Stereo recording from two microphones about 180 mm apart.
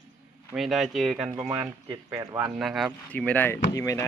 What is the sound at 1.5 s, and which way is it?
Speech, 20° right (ahead or behind).